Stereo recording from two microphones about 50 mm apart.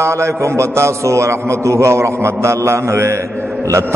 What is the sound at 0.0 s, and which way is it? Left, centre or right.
A man's voice, right.